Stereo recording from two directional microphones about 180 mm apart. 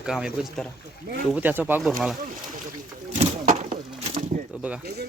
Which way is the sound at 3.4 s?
45° right (ahead or behind).